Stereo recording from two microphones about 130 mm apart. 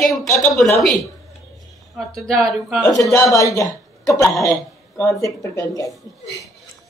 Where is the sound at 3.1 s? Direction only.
25° left (ahead or behind).